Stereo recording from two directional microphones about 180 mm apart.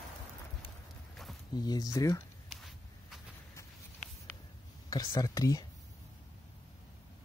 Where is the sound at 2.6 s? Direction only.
Centre (ahead or behind).